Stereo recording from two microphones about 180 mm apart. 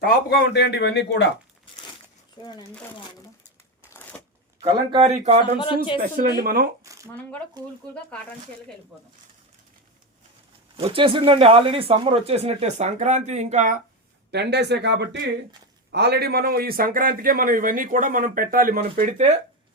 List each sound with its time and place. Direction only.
0.0 s a man's voice: 60° left (ahead or behind); by 1.3 s 75° left (ahead or behind)
3.8 s shuffling cards: 10° left (ahead or behind)
4.6 s speech: 30° right (ahead or behind)
5.5 s speech: 30° left (ahead or behind)
6.4 s speech: 55° right (ahead or behind)
6.8 s shuffling cards: 15° right (ahead or behind)
7.2 s speech: 5° left (ahead or behind)
10.8 s speech: 30° right (ahead or behind)
14.3 s a man's voice: 70° right (ahead or behind); by 19.4 s 40° right (ahead or behind)